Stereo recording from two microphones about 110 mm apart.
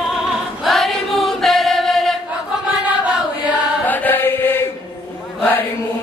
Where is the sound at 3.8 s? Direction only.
15° left (ahead or behind).